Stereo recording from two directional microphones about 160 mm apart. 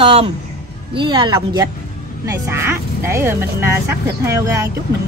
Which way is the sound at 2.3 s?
15° right (ahead or behind).